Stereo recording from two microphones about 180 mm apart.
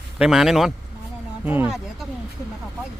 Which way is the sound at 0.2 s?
Centre (ahead or behind).